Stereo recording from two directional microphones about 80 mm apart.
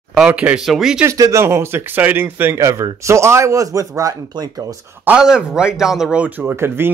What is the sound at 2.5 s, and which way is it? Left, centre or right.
Speech, right.